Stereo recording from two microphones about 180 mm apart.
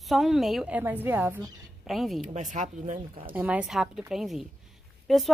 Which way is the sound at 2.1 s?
40° right (ahead or behind).